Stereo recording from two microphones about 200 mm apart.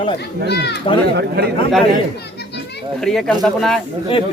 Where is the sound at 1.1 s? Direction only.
55° right (ahead or behind).